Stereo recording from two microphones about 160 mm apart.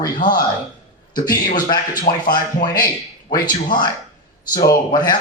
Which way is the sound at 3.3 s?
25° left (ahead or behind).